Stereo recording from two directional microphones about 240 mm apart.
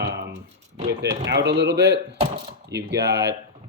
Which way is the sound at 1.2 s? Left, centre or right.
Right.